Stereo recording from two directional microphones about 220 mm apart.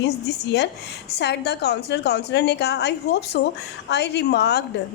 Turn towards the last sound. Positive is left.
turn(degrees=50)  # may be behind; listen again after turning